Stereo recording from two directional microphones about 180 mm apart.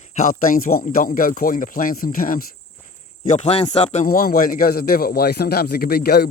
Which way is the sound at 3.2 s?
40° left (ahead or behind).